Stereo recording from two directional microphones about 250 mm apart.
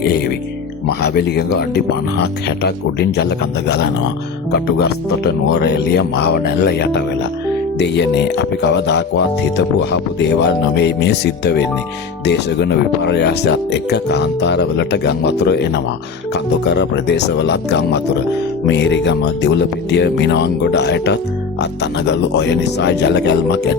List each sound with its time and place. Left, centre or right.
0.0 s speech: left
4.5 s speech: left